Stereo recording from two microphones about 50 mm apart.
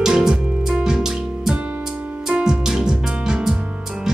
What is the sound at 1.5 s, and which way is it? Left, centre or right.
Music, right.